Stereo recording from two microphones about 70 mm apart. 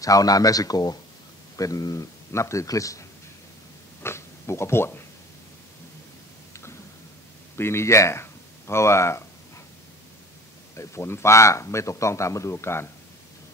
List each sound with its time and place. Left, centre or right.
0.0 s speech: left
4.0 s speech: left
7.5 s speech: left
10.8 s speech: left